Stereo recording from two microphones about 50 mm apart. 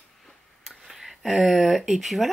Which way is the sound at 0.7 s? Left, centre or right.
Centre.